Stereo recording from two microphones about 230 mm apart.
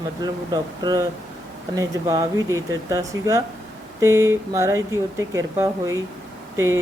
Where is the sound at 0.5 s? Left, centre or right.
Centre.